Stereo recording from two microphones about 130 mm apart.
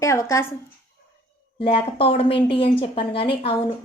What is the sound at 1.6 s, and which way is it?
A woman's voice, 45° left (ahead or behind).